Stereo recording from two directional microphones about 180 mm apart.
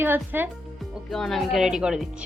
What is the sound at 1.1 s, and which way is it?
A woman's voice, centre (ahead or behind).